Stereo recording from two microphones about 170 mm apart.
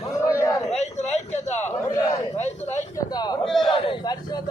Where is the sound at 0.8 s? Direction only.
40° left (ahead or behind).